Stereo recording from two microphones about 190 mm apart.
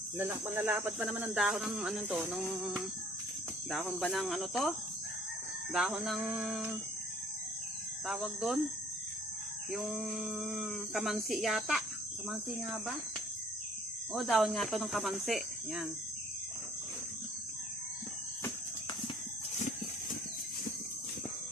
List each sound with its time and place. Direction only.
0.2 s cricket: 10° right (ahead or behind)
3.7 s speech: centre (ahead or behind)
5.7 s speech: centre (ahead or behind)
8.0 s speech: centre (ahead or behind)
9.7 s speech: centre (ahead or behind)
14.1 s speech: centre (ahead or behind)